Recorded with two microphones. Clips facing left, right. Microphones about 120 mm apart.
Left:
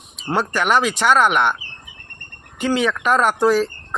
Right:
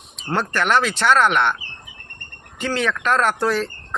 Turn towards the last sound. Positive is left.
turn(degrees=10)  # may be behind; listen again after turning